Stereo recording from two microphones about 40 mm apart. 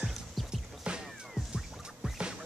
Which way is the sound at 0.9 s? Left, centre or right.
Right.